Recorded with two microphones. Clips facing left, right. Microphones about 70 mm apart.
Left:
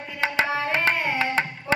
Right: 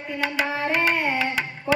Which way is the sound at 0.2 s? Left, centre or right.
Left.